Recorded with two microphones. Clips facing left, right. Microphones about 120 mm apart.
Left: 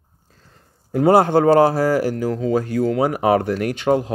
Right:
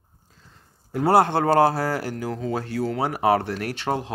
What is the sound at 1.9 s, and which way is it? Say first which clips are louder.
Speech: left 8 dB; 15° left (ahead or behind).